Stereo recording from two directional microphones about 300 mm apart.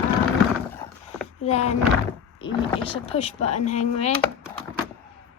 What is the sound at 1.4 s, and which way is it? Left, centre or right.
Speech, left.